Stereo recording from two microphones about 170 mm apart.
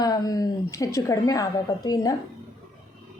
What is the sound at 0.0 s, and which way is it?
A woman's voice, 20° left (ahead or behind).